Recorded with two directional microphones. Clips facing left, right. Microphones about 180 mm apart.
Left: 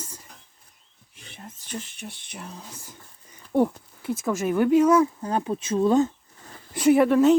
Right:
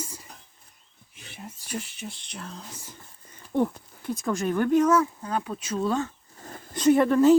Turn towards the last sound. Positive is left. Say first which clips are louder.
# left 1 dB
turn(degrees=5)  # may be behind; listen again after turning